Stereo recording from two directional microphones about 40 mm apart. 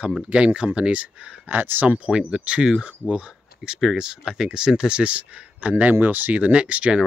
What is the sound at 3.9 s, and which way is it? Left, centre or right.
Speech, centre.